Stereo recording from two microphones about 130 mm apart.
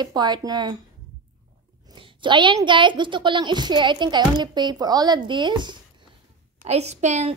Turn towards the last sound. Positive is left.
turn(degrees=-60)  # may be behind; listen again after turning